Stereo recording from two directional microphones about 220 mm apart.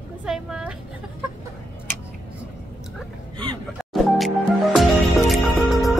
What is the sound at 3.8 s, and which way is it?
Music, centre (ahead or behind).